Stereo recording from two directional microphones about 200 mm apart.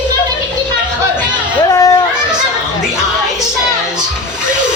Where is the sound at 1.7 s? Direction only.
20° left (ahead or behind).